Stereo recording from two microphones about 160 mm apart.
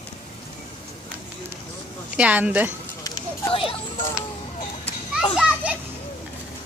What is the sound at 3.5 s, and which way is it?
Speech, 35° left (ahead or behind).